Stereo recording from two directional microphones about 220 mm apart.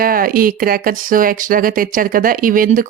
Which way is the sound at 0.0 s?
40° right (ahead or behind).